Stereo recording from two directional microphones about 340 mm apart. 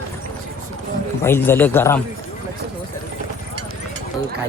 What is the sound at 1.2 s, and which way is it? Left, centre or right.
Speech, centre.